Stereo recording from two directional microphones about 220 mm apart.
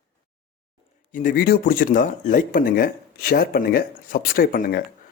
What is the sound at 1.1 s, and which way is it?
Speech, 35° left (ahead or behind).